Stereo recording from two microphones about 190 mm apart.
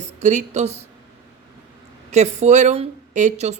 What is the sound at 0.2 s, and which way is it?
Speech, 40° right (ahead or behind).